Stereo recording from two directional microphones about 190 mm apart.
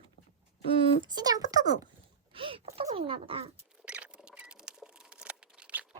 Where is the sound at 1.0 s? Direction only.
20° right (ahead or behind).